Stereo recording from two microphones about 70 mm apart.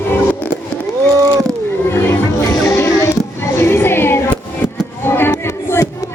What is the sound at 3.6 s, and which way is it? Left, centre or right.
Music, left.